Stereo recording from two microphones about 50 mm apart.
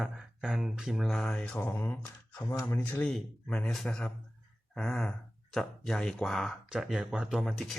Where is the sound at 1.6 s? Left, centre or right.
Left.